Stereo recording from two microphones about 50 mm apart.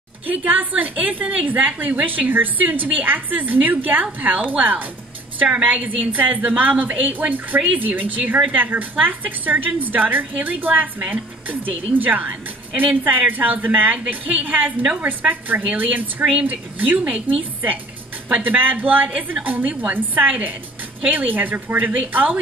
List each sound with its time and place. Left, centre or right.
0.3 s a woman's voice: right
18.3 s a woman's voice: right